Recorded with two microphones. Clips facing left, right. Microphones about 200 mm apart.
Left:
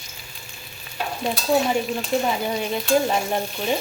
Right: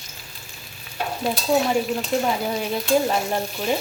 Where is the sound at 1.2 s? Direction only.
Centre (ahead or behind).